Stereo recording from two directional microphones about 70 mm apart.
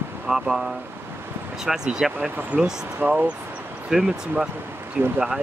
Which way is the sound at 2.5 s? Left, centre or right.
Right.